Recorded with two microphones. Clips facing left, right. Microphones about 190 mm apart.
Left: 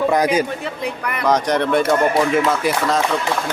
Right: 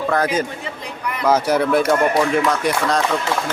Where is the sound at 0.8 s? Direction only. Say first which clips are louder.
Left 3 dB; 60° left (ahead or behind).